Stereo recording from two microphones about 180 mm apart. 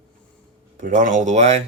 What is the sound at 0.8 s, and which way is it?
Speech, 45° right (ahead or behind).